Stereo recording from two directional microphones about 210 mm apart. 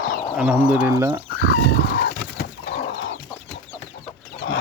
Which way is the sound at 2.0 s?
50° left (ahead or behind).